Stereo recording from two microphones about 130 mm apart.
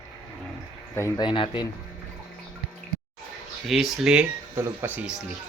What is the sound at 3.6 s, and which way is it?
Speech, 5° right (ahead or behind).